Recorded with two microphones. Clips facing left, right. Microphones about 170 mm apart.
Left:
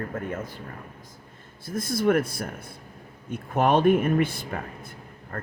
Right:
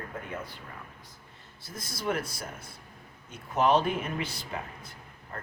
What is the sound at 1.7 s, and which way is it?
Speech, 55° left (ahead or behind).